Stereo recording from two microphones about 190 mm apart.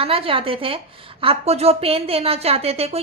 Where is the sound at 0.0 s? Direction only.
30° right (ahead or behind).